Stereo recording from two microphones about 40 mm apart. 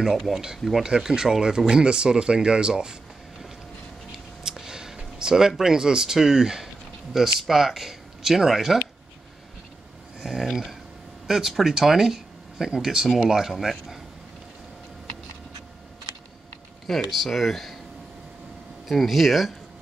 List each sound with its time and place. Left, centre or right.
0.0 s speech: centre
0.8 s speech: centre
4.4 s a sound: centre
5.6 s speech: centre
10.2 s speech: centre
16.8 s speech: centre
18.9 s speech: centre